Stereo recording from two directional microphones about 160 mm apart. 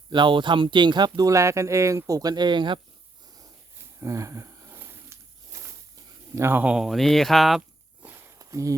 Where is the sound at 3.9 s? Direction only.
20° right (ahead or behind).